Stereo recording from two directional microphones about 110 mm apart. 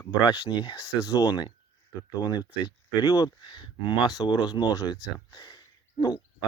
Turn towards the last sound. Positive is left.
turn(degrees=40)  # may be behind; listen again after turning